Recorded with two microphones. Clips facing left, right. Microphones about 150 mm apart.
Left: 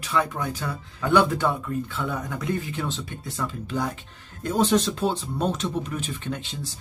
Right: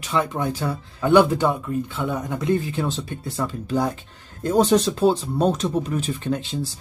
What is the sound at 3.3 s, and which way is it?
Speech, 35° right (ahead or behind).